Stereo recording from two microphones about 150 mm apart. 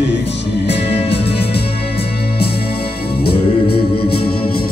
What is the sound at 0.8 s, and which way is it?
Music, 40° left (ahead or behind).